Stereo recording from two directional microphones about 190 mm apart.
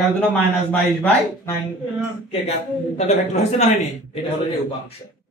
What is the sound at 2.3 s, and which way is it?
A man's voice, 35° left (ahead or behind).